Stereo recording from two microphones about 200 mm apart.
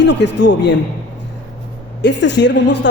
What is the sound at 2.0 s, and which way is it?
Speech, 60° left (ahead or behind).